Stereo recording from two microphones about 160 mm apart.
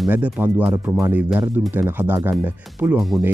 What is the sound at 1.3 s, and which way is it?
Speech, 5° right (ahead or behind).